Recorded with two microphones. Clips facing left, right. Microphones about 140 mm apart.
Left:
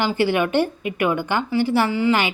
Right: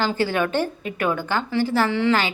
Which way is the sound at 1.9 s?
5° left (ahead or behind).